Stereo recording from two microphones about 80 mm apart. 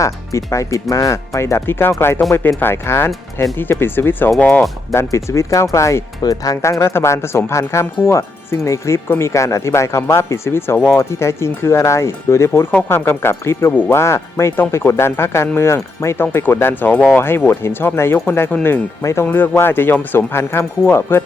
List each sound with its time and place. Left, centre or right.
0.0 s speech: left; by 4.6 s centre
4.9 s speech: left